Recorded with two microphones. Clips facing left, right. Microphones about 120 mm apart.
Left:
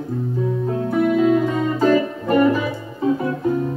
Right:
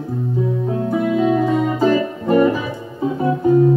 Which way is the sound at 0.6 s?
5° right (ahead or behind).